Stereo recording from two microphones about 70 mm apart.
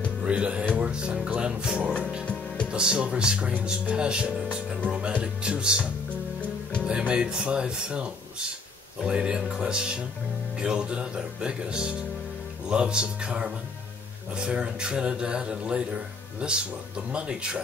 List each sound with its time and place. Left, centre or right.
0.2 s music: centre
0.7 s a man's voice: centre